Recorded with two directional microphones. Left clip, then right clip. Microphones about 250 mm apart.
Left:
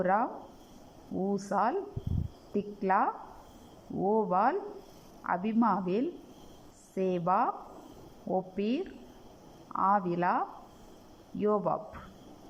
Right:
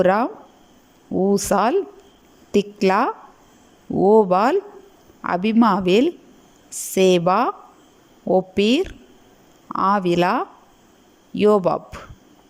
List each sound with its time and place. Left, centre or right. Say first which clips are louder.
0.0 s a woman's voice: right 11 dB; right